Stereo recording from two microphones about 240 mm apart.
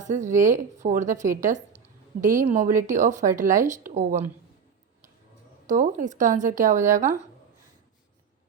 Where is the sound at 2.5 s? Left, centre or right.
Right.